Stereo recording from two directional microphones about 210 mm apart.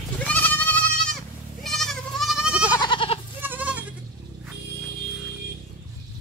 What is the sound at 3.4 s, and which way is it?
Goat, 10° right (ahead or behind).